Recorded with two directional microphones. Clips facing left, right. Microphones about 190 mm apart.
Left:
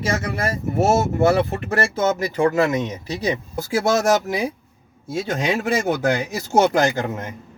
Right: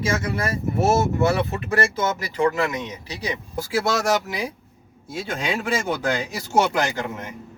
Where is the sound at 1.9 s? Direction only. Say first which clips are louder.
Left 4 dB; 45° left (ahead or behind).